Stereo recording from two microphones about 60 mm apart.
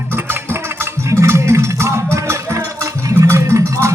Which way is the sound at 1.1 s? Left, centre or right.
Right.